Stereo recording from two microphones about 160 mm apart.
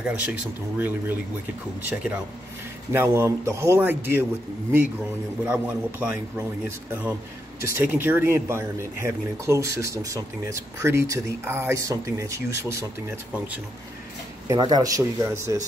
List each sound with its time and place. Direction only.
0.0 s speech: 10° right (ahead or behind)
2.9 s speech: 15° right (ahead or behind)
5.4 s speech: 10° right (ahead or behind)
14.5 s speech: 25° right (ahead or behind)